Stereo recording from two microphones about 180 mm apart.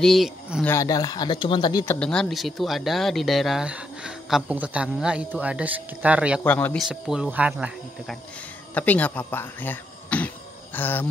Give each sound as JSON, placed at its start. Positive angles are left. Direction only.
{"t": 0.0, "sound": "speech", "side_deg": 0}
{"t": 0.7, "sound": "speech", "side_deg": 20}
{"t": 2.0, "sound": "speech", "side_deg": 5}
{"t": 6.4, "sound": "speech", "side_deg": 10}
{"t": 6.9, "sound": "speech", "side_deg": -5}
{"t": 8.7, "sound": "speech", "side_deg": 10}